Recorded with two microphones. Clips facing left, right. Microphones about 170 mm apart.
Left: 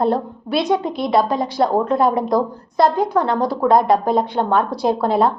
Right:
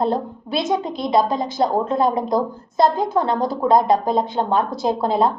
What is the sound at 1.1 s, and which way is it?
A woman's voice, 20° right (ahead or behind).